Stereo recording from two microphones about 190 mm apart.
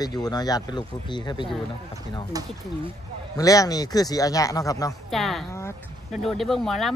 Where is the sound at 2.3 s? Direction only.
20° right (ahead or behind).